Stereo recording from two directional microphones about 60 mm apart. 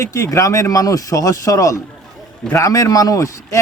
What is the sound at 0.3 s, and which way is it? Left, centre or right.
Speech, left.